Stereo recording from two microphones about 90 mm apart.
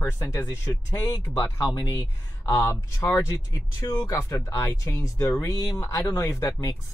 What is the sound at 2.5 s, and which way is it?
Speech, 30° left (ahead or behind).